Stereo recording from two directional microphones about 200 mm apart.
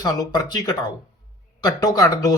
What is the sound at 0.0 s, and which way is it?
Speech, 20° left (ahead or behind).